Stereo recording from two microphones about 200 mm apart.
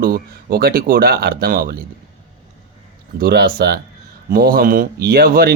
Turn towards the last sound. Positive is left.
turn(degrees=-50)  # may be behind; listen again after turning